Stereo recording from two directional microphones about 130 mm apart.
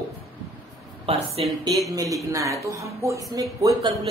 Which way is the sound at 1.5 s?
25° right (ahead or behind).